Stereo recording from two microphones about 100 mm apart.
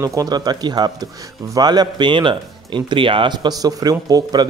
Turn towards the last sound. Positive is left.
turn(degrees=-40)  # may be behind; listen again after turning